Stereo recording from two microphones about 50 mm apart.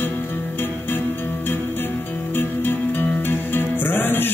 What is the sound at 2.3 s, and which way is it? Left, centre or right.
Music, left.